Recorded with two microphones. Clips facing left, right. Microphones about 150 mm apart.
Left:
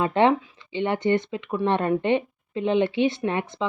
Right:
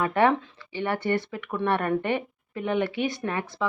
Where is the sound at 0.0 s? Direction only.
20° left (ahead or behind).